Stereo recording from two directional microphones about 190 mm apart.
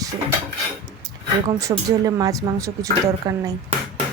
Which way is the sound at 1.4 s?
20° right (ahead or behind).